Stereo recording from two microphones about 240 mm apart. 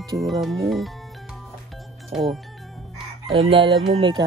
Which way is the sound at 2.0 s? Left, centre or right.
Centre.